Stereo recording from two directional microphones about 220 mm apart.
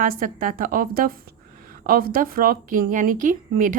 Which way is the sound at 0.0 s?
40° right (ahead or behind).